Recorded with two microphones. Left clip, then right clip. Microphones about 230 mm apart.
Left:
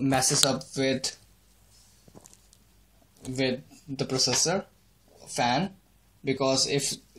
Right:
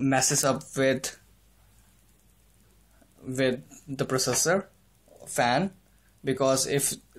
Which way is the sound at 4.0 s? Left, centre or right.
Centre.